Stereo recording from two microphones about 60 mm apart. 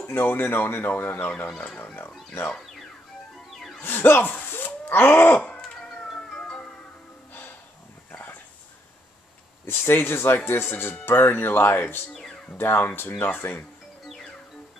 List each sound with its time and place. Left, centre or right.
0.0 s speech: left
3.8 s speech: left
5.5 s cat: centre
9.7 s speech: left
12.1 s music: centre
12.5 s speech: left